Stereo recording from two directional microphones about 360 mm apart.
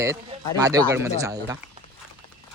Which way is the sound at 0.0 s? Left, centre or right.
Centre.